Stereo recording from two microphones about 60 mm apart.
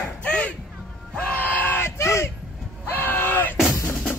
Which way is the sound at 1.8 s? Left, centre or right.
Left.